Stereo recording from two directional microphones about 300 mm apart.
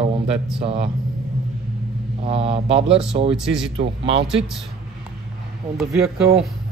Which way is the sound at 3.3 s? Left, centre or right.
Centre.